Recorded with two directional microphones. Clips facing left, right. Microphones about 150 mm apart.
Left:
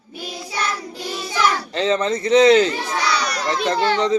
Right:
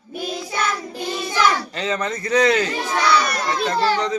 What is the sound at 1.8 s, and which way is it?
Speech, 25° left (ahead or behind).